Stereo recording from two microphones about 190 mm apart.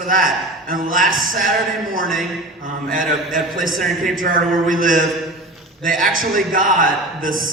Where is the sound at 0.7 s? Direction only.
45° right (ahead or behind).